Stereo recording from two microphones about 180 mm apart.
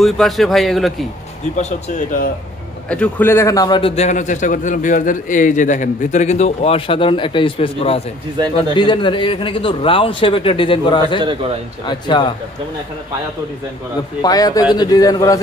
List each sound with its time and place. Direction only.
0.0 s speech: centre (ahead or behind)
1.6 s speech: 40° left (ahead or behind)
2.9 s a man's voice: 10° left (ahead or behind); by 3.9 s 25° left (ahead or behind)
3.9 s a man's voice: 40° left (ahead or behind)
11.1 s a man's voice: 25° right (ahead or behind)
11.8 s a man's voice: 25° left (ahead or behind)
14.2 s a man's voice: 20° left (ahead or behind)